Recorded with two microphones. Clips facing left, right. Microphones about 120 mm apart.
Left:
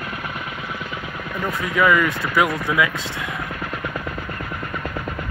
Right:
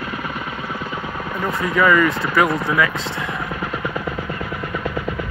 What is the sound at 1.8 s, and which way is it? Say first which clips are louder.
Speech: right 2 dB; 5° left (ahead or behind).